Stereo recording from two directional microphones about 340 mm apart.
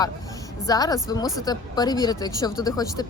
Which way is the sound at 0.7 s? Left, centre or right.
Centre.